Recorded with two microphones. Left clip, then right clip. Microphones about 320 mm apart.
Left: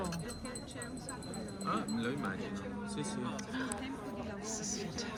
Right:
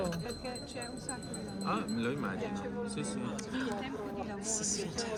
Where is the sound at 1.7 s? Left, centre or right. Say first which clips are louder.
Right 2 dB; right.